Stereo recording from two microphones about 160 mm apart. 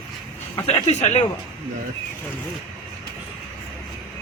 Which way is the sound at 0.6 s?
40° left (ahead or behind).